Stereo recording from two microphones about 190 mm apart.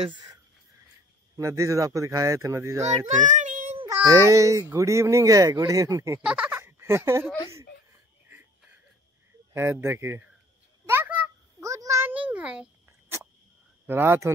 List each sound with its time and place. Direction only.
0.0 s speech: 25° right (ahead or behind)
3.2 s child singing: 40° right (ahead or behind)
3.9 s speech: 15° right (ahead or behind)
6.2 s a sound: 5° right (ahead or behind)
9.5 s speech: 15° right (ahead or behind)
10.9 s a sound: 10° right (ahead or behind)
13.8 s speech: 10° right (ahead or behind)